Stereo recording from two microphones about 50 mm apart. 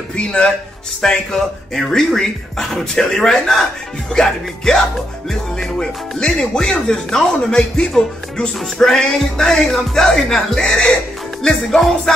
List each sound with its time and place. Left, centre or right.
0.1 s speech: left
1.0 s speech: centre